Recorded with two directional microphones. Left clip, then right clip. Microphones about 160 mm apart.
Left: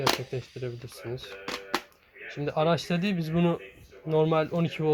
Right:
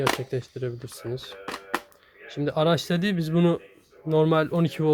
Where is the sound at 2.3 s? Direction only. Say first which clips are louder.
Right 3 dB; 45° right (ahead or behind).